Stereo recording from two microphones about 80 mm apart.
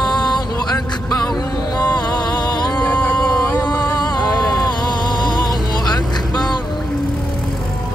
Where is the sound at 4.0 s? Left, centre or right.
Left.